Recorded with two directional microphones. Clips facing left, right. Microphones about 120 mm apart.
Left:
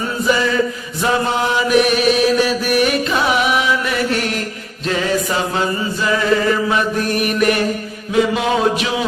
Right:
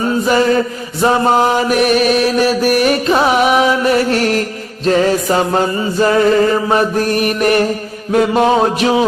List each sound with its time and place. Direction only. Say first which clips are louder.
0.3 s chant: right 4 dB; 45° right (ahead or behind)
1.0 s mantra: right 6 dB; 40° right (ahead or behind)